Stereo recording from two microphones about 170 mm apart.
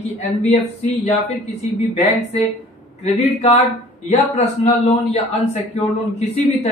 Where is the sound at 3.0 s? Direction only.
40° left (ahead or behind).